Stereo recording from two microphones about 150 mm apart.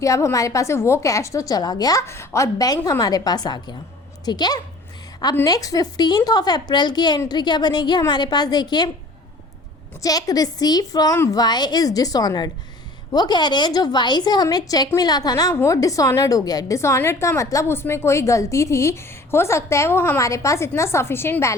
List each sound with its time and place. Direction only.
0.0 s a woman's voice: 20° left (ahead or behind)
10.0 s a woman's voice: 25° left (ahead or behind)